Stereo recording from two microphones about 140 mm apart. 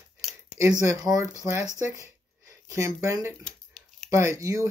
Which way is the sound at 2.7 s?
20° right (ahead or behind).